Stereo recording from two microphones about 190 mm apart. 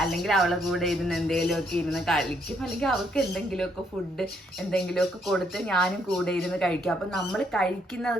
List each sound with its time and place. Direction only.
0.0 s speech: centre (ahead or behind)
4.7 s speech: centre (ahead or behind)